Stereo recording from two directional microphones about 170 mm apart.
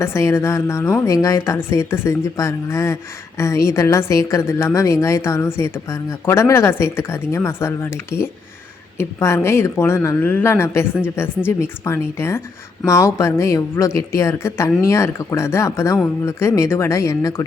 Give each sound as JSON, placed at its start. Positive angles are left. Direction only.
{"t": 0.0, "sound": "a woman's voice", "side_deg": 15}